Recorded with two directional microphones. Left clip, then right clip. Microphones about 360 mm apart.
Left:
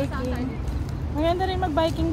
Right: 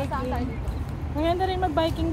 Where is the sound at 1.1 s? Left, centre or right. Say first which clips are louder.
Left 1 dB; centre.